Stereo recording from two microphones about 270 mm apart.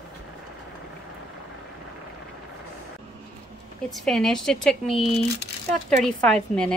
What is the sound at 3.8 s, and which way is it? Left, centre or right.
A woman's voice, centre.